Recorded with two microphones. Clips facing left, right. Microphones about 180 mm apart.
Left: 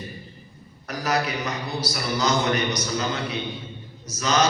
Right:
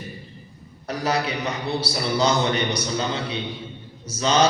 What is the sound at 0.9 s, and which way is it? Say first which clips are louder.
A man's voice: right 1 dB; 30° right (ahead or behind).